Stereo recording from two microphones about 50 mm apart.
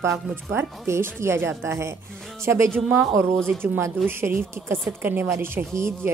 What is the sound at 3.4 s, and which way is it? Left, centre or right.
A woman's voice, right.